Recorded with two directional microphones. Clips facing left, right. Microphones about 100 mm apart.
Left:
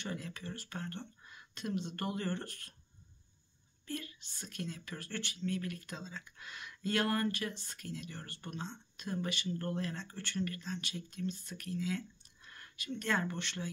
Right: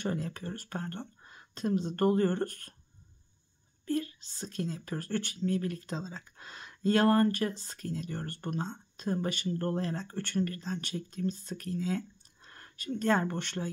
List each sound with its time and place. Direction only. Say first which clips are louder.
0.0 s speech: right 8 dB; 40° right (ahead or behind)
3.8 s a woman's voice: right 11 dB; 35° right (ahead or behind)